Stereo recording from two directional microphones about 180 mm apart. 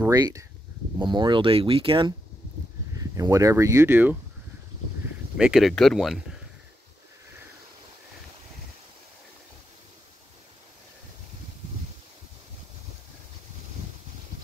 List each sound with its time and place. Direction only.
0.1 s speech: 20° right (ahead or behind)
5.4 s speech: centre (ahead or behind)